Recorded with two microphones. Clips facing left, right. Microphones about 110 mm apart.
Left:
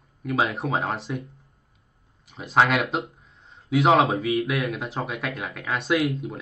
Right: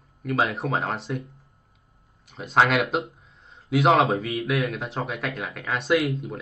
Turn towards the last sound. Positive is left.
turn(degrees=0)  # may be behind; listen again after turning